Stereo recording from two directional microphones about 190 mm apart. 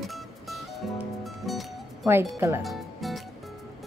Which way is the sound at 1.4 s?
Centre (ahead or behind).